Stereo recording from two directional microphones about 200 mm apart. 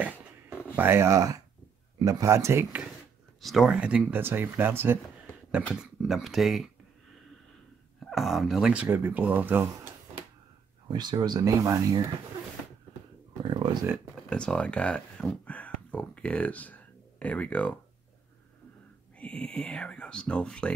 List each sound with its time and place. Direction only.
0.7 s speech: 10° right (ahead or behind)
3.3 s speech: centre (ahead or behind)
8.0 s speech: centre (ahead or behind)
10.9 s speech: 20° right (ahead or behind)
13.4 s a sound: 25° right (ahead or behind)
14.3 s speech: 5° left (ahead or behind)
19.1 s speech: 5° left (ahead or behind)